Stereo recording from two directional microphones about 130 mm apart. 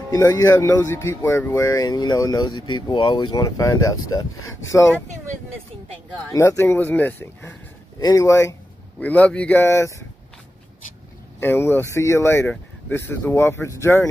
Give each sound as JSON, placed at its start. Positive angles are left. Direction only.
{"t": 0.1, "sound": "speech", "side_deg": 25}
{"t": 1.7, "sound": "speech", "side_deg": 30}
{"t": 6.3, "sound": "speech", "side_deg": 20}
{"t": 8.0, "sound": "speech", "side_deg": 30}
{"t": 9.0, "sound": "speech", "side_deg": 10}
{"t": 11.3, "sound": "speech", "side_deg": 20}